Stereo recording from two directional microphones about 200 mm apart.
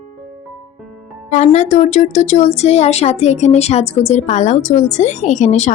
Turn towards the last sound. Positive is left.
turn(degrees=35)  # may be behind; listen again after turning